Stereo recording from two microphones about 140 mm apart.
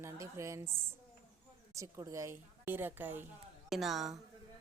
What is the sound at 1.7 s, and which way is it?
A woman's voice, 25° right (ahead or behind).